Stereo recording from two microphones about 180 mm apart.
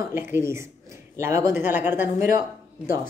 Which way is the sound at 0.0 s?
10° right (ahead or behind).